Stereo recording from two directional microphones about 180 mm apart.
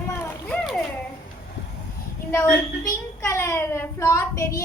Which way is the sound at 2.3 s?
15° left (ahead or behind).